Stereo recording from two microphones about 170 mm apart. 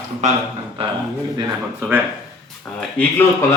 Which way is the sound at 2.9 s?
15° left (ahead or behind).